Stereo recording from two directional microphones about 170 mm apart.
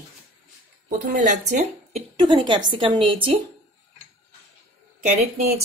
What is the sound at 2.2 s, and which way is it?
A woman's voice, 30° right (ahead or behind).